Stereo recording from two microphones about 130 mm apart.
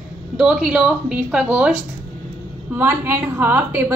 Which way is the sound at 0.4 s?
5° right (ahead or behind).